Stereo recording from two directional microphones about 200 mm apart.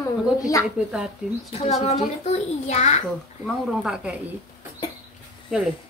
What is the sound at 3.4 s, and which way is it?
Speech, centre (ahead or behind).